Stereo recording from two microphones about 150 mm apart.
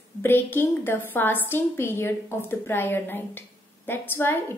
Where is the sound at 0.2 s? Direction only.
15° left (ahead or behind).